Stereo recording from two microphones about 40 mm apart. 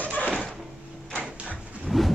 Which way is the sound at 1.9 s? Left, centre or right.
Centre.